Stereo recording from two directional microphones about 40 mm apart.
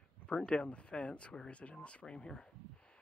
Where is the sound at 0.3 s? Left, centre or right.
Left.